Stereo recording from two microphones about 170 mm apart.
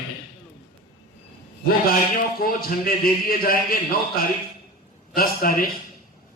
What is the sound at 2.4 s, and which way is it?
A man's voice, 60° left (ahead or behind).